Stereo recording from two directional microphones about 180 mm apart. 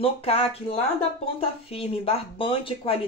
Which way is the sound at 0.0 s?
30° left (ahead or behind).